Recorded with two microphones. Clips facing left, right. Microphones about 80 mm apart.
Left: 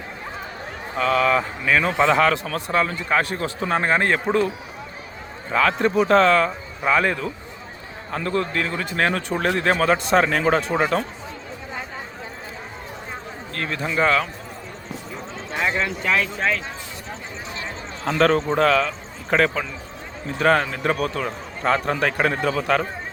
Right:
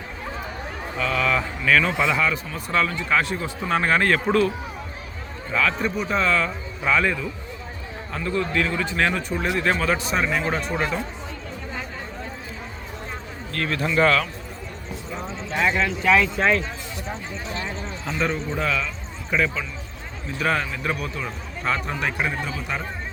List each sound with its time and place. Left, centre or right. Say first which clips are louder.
0.9 s speech: left 4 dB; left
2.0 s a man's voice: left 5 dB; left
2.7 s a man's voice: left 1 dB; left
5.5 s speech: left 4 dB; left
6.1 s a man's voice: left 6 dB; left
6.4 s a man's voice: left 3 dB; left
13.5 s a man's voice: right 2 dB; left
15.5 s speech: right 1 dB; centre
16.0 s speech: right 5 dB; centre
18.0 s a man's voice: left 8 dB; left
18.5 s speech: left 7 dB; left
20.4 s a man's voice: left 5 dB; left